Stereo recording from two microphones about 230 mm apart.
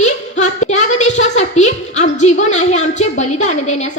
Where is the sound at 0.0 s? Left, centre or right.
Left.